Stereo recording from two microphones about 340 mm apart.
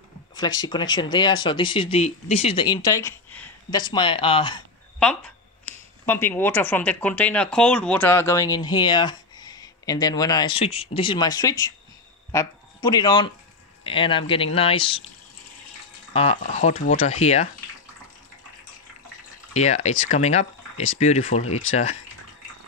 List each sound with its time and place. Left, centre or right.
0.3 s speech: centre
6.0 s speech: centre
16.1 s speech: centre
19.5 s speech: centre